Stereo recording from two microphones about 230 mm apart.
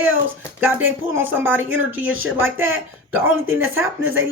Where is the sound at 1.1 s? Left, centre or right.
Centre.